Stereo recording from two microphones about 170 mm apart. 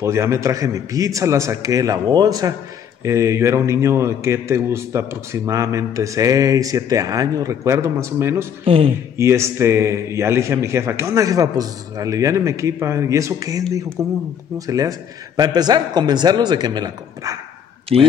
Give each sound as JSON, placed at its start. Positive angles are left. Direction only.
{"t": 0.0, "sound": "a man's voice", "side_deg": -15}
{"t": 8.6, "sound": "speech", "side_deg": -30}
{"t": 9.1, "sound": "a man's voice", "side_deg": -15}
{"t": 17.9, "sound": "speech", "side_deg": -35}